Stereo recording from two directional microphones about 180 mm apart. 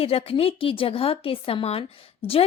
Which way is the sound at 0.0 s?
35° left (ahead or behind).